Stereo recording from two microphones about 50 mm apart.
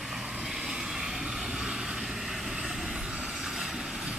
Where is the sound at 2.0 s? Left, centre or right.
Centre.